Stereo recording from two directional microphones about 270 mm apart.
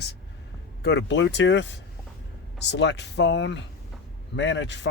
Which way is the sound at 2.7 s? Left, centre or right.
Left.